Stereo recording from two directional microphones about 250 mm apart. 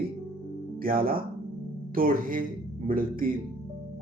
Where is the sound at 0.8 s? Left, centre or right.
Right.